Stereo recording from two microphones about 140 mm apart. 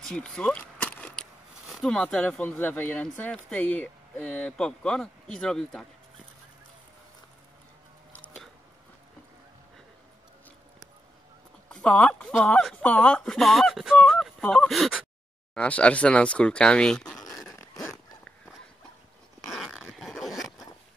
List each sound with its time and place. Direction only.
0.0 s a sound: 5° left (ahead or behind)
1.7 s speech: 5° left (ahead or behind)
8.1 s biting: 10° left (ahead or behind)
11.7 s speech: 5° left (ahead or behind)
15.5 s speech: 10° left (ahead or behind)
17.2 s a sound: 25° left (ahead or behind)
17.6 s dog: 25° left (ahead or behind)
19.4 s zipper: centre (ahead or behind)